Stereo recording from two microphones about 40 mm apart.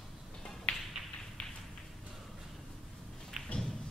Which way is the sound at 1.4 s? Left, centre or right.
Left.